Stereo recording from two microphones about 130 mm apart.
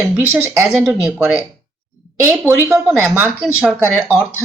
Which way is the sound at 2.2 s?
20° right (ahead or behind).